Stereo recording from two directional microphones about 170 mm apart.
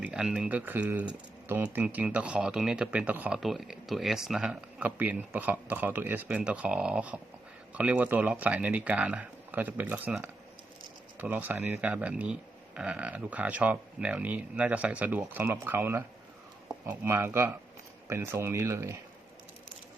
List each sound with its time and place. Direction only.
0.0 s speech: 5° right (ahead or behind)